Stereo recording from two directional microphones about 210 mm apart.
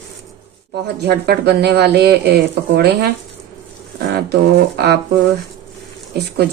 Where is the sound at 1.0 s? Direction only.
50° right (ahead or behind).